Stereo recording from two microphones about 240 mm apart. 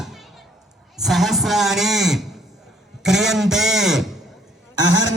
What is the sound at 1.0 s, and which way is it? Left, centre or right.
A man's voice, centre.